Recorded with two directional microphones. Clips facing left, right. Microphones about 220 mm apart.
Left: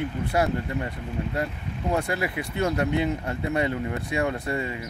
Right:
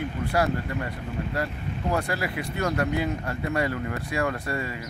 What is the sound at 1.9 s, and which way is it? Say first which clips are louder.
Speech: left 2 dB; 25° left (ahead or behind).